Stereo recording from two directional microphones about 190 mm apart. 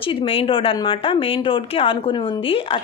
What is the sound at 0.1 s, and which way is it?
A woman's voice, 25° left (ahead or behind).